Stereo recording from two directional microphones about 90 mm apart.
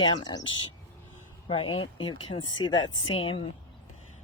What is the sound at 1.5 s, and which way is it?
Speech, 85° left.